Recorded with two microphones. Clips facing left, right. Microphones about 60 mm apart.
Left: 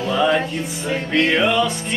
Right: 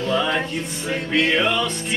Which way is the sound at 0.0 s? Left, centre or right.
Centre.